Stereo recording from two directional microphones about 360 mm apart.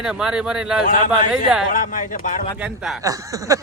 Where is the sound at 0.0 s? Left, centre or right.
Centre.